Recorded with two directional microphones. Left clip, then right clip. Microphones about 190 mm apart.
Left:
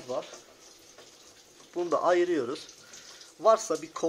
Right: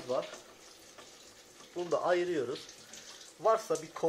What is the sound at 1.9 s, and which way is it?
Speech, 55° left (ahead or behind).